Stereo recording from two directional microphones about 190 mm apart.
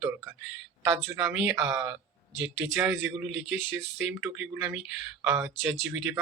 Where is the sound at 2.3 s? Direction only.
70° right (ahead or behind).